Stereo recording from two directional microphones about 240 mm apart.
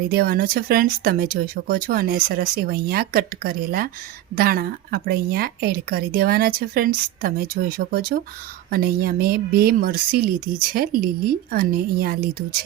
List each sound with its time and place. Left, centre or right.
0.1 s a woman's voice: right